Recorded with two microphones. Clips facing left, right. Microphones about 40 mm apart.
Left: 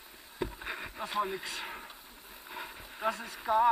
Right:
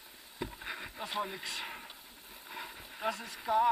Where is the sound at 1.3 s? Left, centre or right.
Centre.